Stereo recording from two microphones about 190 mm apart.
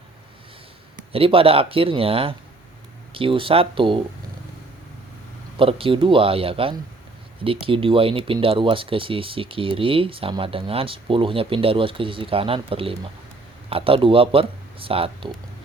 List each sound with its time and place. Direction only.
1.1 s speech: 30° right (ahead or behind)
5.5 s speech: 30° right (ahead or behind)